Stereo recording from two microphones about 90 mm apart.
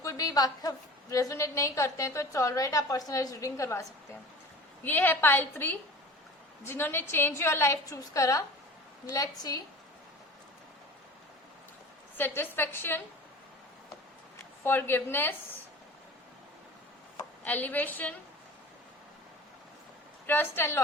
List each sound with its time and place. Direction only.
0.0 s a woman's voice: 40° left (ahead or behind)
4.8 s a woman's voice: 20° left (ahead or behind); by 9.6 s 45° left (ahead or behind)
12.1 s a woman's voice: 25° left (ahead or behind)
14.6 s a woman's voice: 25° left (ahead or behind)
17.4 s a woman's voice: 20° left (ahead or behind)
20.2 s a woman's voice: 25° left (ahead or behind)